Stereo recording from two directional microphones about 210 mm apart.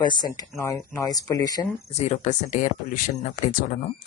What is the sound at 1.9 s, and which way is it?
Speech, 35° left (ahead or behind).